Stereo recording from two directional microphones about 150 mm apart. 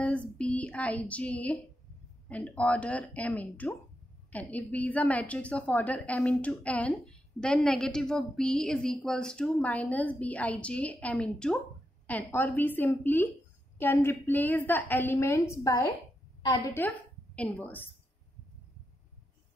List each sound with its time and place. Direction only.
0.4 s a woman's voice: 10° left (ahead or behind)
16.8 s speech: 10° left (ahead or behind)